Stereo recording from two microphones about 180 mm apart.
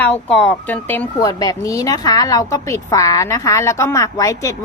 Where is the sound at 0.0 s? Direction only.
5° left (ahead or behind).